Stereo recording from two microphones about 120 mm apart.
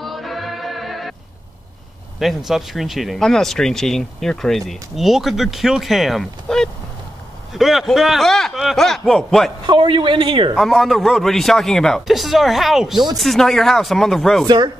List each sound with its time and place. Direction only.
0.0 s music: centre (ahead or behind)
2.1 s speech: centre (ahead or behind)
9.7 s speech: 45° right (ahead or behind)
10.5 s speech: centre (ahead or behind)